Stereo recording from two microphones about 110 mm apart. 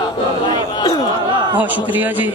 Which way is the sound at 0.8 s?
40° left (ahead or behind).